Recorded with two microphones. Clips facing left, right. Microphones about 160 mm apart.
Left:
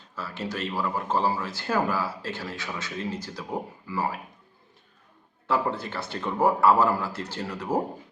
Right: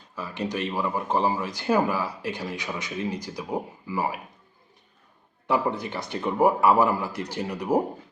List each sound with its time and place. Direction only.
0.2 s speech: 15° right (ahead or behind)
5.5 s speech: 15° right (ahead or behind)